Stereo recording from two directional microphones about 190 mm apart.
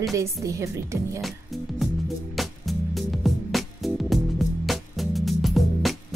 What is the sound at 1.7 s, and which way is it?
Music, centre (ahead or behind).